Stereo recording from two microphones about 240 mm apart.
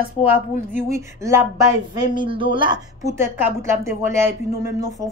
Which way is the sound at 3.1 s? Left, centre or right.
Centre.